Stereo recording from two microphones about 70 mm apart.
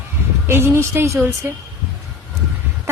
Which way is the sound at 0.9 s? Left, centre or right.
Right.